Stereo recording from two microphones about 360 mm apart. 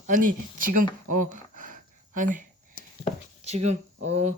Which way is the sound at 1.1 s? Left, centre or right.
Right.